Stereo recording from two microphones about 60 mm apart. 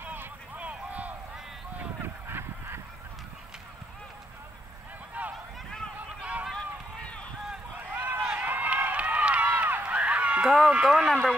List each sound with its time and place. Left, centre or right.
0.0 s vehicle: right
0.7 s a sound: right
2.2 s honk: right
5.2 s run: right
6.5 s run: centre
7.9 s a sound: right
8.4 s run: right
10.4 s speech: centre